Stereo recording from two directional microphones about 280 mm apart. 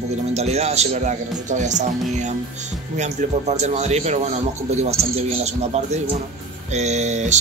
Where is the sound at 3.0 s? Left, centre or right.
Right.